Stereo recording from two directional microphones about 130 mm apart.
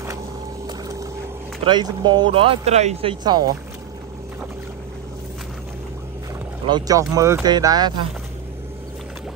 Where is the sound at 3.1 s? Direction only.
35° right (ahead or behind).